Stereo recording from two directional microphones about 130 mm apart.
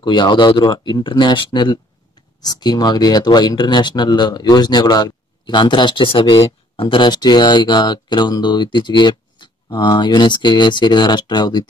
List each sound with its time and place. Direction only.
0.0 s speech: 35° left (ahead or behind)